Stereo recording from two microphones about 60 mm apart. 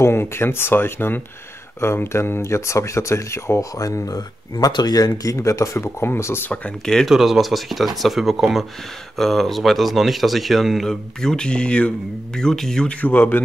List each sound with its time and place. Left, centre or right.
0.0 s speech: left
3.7 s speech: left
5.8 s speech: left
7.1 s speech: centre
12.8 s speech: left